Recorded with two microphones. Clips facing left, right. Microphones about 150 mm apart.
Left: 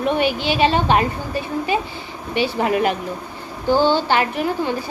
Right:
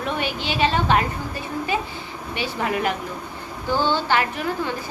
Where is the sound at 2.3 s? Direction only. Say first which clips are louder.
Left 6 dB; 20° left (ahead or behind).